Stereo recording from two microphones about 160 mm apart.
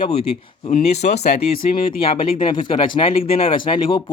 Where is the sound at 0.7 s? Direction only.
80° left.